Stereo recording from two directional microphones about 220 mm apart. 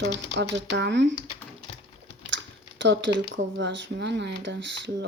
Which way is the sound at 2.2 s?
55° right (ahead or behind).